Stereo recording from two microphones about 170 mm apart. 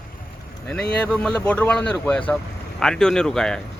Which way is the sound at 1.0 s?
5° left (ahead or behind).